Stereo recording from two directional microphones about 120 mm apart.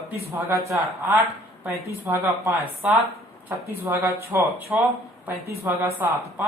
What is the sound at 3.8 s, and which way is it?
Speech, 25° right (ahead or behind).